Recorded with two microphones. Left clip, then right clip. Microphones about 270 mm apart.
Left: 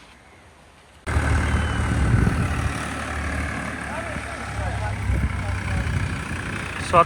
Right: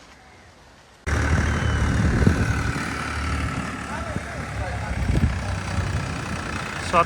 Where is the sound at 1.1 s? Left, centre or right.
Left.